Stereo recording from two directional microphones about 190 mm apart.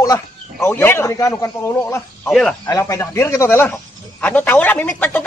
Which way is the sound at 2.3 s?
Centre (ahead or behind).